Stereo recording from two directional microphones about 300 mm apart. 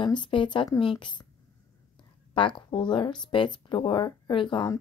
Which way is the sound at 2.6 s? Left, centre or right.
Centre.